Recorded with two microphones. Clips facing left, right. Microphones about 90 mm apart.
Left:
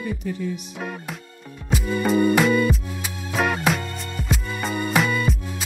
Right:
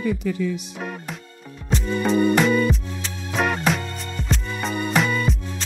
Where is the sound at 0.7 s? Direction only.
Centre (ahead or behind).